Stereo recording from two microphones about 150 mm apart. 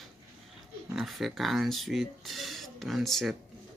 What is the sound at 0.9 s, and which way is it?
Speech, centre (ahead or behind).